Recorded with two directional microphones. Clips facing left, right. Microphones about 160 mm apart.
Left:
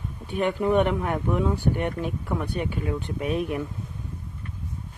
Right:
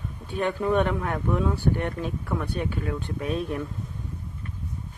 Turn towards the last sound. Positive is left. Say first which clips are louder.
# left 2 dB
turn(degrees=15)  # may be behind; listen again after turning